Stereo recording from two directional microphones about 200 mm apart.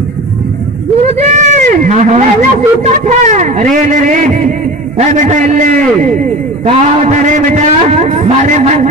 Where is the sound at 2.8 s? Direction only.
35° right (ahead or behind).